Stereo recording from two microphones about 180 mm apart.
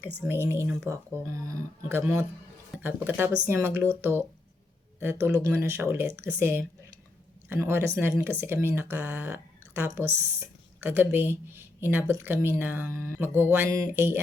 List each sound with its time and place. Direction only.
0.3 s speech: 15° right (ahead or behind)